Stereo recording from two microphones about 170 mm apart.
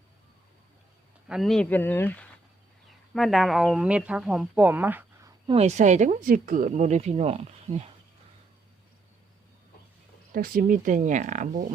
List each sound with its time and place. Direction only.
1.3 s speech: centre (ahead or behind)
5.5 s speech: 40° right (ahead or behind)
10.3 s speech: 55° right (ahead or behind)